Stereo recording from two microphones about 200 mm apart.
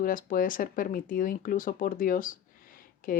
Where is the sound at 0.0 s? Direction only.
45° left (ahead or behind).